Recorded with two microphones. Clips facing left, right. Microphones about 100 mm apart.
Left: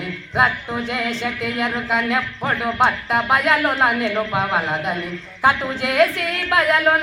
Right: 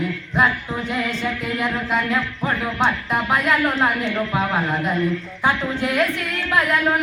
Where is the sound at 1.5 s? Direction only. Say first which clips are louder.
Left 1 dB; 20° left (ahead or behind).